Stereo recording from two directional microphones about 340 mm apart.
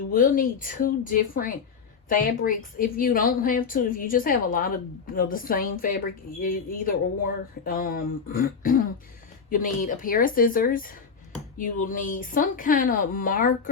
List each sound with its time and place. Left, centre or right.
0.1 s a woman's voice: left